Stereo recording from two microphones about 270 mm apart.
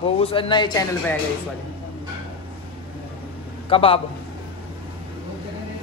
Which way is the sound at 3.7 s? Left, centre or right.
Centre.